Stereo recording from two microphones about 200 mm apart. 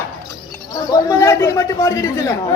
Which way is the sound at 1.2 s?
15° left (ahead or behind).